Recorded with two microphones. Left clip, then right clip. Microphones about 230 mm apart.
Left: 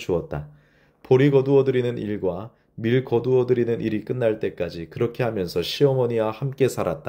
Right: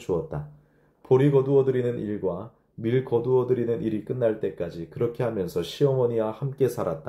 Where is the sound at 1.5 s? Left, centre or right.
Left.